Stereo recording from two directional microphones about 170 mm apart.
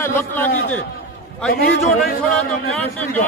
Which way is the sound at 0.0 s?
15° left (ahead or behind).